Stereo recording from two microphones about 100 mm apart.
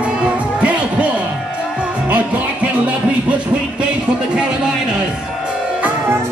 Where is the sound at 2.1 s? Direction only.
15° right (ahead or behind).